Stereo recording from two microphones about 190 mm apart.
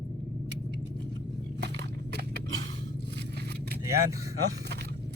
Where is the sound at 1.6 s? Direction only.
60° right (ahead or behind).